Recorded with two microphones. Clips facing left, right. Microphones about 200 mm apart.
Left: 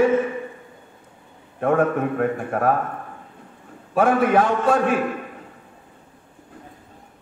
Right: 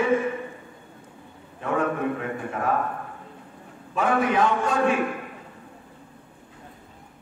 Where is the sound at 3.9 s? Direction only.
55° left (ahead or behind).